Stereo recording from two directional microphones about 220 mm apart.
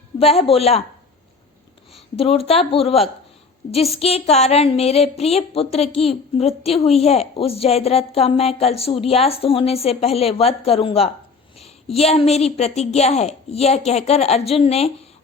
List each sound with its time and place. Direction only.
0.2 s a woman's voice: 25° left (ahead or behind)
1.9 s a woman's voice: 25° left (ahead or behind)